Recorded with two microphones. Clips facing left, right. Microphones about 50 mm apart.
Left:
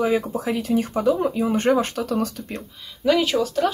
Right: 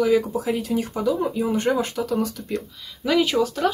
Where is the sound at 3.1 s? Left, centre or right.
Centre.